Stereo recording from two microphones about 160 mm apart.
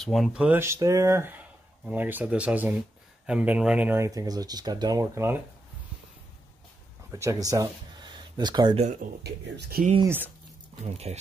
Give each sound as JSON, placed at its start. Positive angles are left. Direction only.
{"t": 0.0, "sound": "speech", "side_deg": 0}
{"t": 7.1, "sound": "speech", "side_deg": -20}
{"t": 8.7, "sound": "speech", "side_deg": -45}
{"t": 9.2, "sound": "speech", "side_deg": -80}
{"t": 10.0, "sound": "speech", "side_deg": -10}
{"t": 10.8, "sound": "speech", "side_deg": -40}